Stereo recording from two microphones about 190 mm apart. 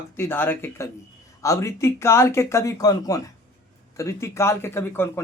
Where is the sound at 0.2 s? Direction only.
10° left (ahead or behind).